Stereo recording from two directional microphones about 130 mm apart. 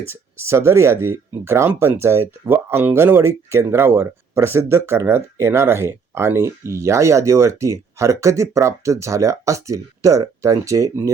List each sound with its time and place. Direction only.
0.1 s speech: 20° right (ahead or behind)